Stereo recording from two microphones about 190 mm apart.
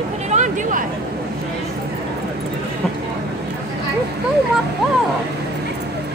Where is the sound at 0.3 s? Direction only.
40° right (ahead or behind).